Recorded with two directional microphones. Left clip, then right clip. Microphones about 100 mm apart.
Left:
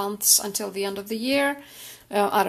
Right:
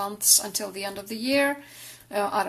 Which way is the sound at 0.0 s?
30° left (ahead or behind).